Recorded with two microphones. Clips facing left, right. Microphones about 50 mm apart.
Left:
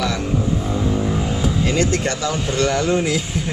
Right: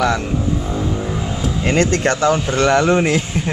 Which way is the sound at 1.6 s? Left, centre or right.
Right.